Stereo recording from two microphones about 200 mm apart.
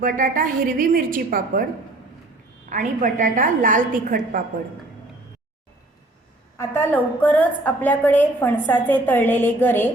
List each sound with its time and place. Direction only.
0.0 s a woman's voice: 45° right (ahead or behind)
2.6 s a woman's voice: 40° right (ahead or behind)
6.6 s a woman's voice: 10° left (ahead or behind)